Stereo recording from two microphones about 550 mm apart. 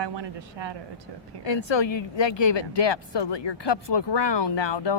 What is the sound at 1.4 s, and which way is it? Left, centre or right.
Speech, left.